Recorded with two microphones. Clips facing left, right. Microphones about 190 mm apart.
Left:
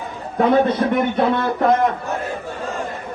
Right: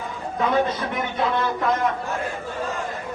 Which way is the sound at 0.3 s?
55° left (ahead or behind).